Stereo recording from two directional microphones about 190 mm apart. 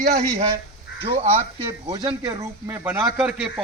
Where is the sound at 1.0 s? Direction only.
30° right (ahead or behind).